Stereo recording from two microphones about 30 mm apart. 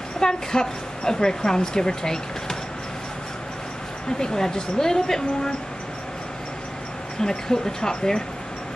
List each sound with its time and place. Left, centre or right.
0.2 s a woman's voice: left
4.2 s a woman's voice: left
7.2 s speech: centre